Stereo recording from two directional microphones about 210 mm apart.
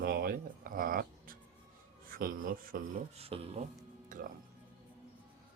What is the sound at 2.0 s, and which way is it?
Speech, 40° right (ahead or behind).